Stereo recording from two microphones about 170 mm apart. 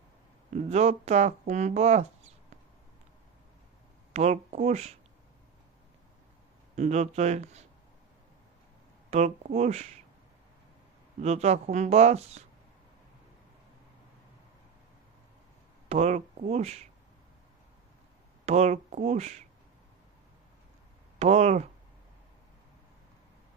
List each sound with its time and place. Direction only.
0.5 s speech: 40° right (ahead or behind)
4.1 s speech: 40° right (ahead or behind)
6.7 s speech: 40° right (ahead or behind)
9.0 s speech: 40° right (ahead or behind)
11.2 s speech: 40° right (ahead or behind)
15.9 s speech: 40° right (ahead or behind)
18.4 s speech: 40° right (ahead or behind)
21.2 s speech: 40° right (ahead or behind)